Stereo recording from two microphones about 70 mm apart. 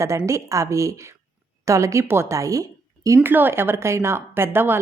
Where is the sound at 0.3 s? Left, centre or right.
Right.